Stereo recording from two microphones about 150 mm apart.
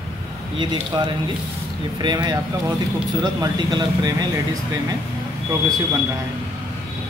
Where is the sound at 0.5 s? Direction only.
30° right (ahead or behind).